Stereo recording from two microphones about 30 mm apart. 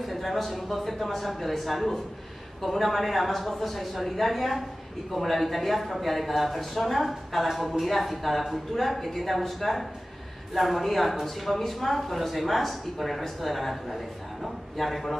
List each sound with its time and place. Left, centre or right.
0.0 s speech: centre